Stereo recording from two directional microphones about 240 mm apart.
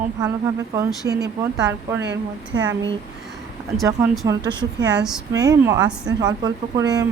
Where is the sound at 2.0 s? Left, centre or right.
Right.